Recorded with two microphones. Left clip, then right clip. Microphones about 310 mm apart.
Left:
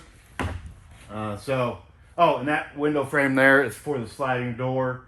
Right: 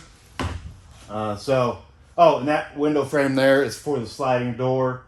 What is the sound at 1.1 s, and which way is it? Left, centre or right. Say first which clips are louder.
Speech: right 5 dB; centre.